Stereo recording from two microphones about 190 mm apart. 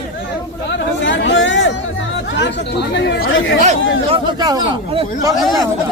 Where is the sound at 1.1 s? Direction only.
75° left (ahead or behind).